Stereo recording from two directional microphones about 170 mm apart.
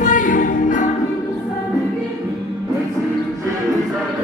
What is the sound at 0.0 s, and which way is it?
Music, 50° left (ahead or behind).